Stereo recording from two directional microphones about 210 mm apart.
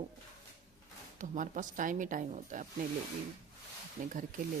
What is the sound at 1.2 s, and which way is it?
A woman's voice, 35° right (ahead or behind).